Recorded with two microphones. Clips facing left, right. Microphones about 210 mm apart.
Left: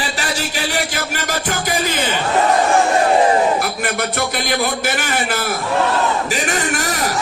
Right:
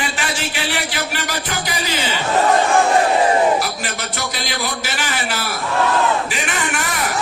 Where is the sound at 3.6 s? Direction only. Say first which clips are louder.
Left 4 dB; 55° left (ahead or behind).